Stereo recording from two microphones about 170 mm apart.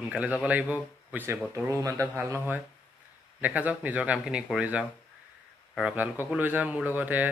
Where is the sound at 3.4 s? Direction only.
10° right (ahead or behind).